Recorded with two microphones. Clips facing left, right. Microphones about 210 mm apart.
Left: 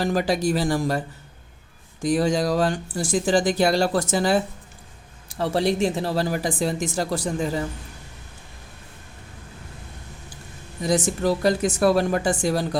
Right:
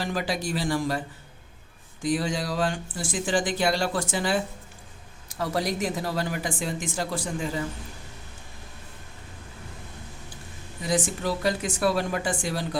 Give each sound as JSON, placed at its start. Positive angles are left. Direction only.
{"t": 0.0, "sound": "speech", "side_deg": 45}
{"t": 5.3, "sound": "speech", "side_deg": 30}
{"t": 10.8, "sound": "speech", "side_deg": 40}